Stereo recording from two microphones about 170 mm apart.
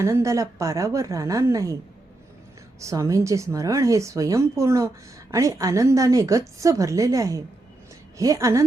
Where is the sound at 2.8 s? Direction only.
20° right (ahead or behind).